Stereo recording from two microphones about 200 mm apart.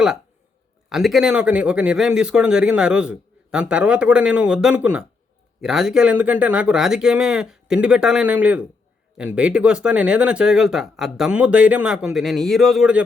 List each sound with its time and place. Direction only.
0.9 s speech: centre (ahead or behind)